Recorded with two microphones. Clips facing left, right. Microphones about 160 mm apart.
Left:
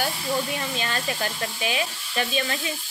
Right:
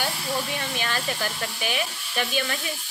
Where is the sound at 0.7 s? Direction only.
30° left (ahead or behind).